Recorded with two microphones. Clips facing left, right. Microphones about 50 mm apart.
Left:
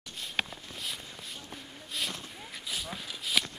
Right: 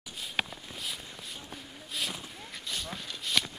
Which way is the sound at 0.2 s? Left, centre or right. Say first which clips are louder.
Even; centre.